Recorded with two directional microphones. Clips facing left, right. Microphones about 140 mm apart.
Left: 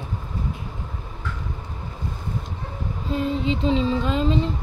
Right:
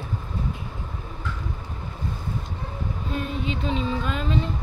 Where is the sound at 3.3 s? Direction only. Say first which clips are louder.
Left 7 dB; 25° left (ahead or behind).